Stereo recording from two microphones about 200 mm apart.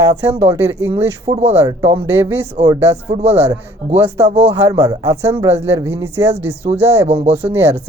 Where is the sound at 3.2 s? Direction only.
30° right (ahead or behind).